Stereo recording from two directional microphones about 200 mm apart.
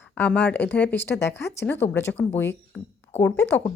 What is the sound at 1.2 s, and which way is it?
Speech, 60° left (ahead or behind).